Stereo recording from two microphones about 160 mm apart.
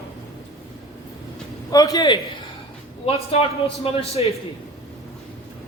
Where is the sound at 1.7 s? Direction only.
25° left (ahead or behind).